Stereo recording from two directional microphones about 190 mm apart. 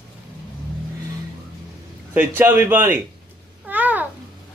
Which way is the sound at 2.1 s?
10° right (ahead or behind).